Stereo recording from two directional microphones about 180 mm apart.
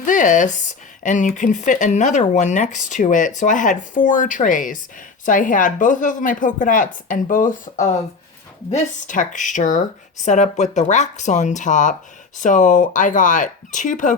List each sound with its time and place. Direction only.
0.0 s speech: 45° left (ahead or behind)